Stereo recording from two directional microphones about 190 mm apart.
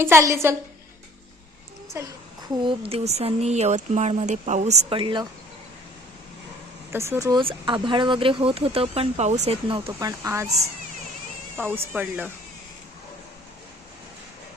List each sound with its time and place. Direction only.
0.0 s speech: 15° right (ahead or behind)
2.6 s speech: 25° right (ahead or behind)
6.9 s speech: 15° right (ahead or behind)
11.5 s speech: 10° right (ahead or behind)